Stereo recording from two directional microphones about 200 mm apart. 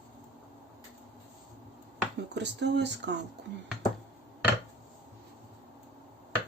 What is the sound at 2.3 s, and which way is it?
Speech, 60° right (ahead or behind).